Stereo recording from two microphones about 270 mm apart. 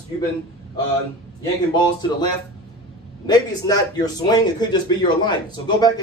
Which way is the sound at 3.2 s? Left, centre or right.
Centre.